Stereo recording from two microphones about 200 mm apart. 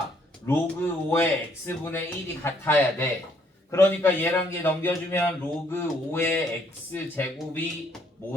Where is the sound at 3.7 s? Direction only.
10° left (ahead or behind).